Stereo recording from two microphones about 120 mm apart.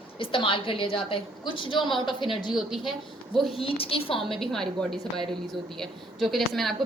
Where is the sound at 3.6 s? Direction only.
50° left (ahead or behind).